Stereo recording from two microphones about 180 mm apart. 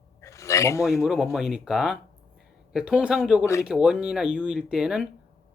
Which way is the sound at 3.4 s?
15° left (ahead or behind).